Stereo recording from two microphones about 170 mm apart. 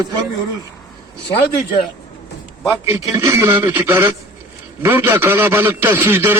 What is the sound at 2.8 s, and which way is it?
Speech, 15° right (ahead or behind).